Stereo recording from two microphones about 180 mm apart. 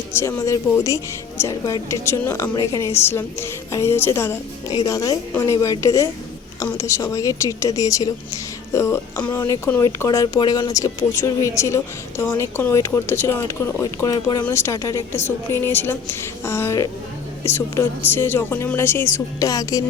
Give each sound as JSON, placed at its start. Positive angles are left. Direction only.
{"t": 0.1, "sound": "a woman's voice", "side_deg": 15}